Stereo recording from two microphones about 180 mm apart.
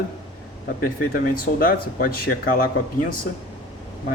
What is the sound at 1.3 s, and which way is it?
Speech, 55° left (ahead or behind).